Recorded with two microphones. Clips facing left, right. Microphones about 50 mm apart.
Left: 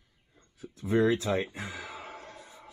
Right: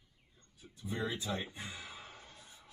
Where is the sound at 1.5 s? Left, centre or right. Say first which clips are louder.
Left 7 dB; left.